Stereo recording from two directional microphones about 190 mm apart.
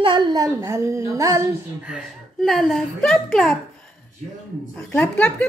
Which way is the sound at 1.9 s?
Centre (ahead or behind).